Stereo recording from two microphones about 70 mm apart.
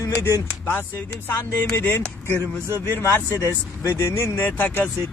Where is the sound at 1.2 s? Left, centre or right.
Left.